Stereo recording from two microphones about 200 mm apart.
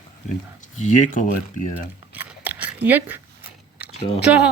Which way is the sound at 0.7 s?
35° left (ahead or behind).